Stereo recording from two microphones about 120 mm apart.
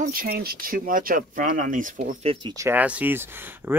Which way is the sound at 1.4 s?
90° right.